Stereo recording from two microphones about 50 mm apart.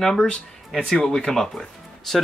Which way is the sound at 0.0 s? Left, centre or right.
Centre.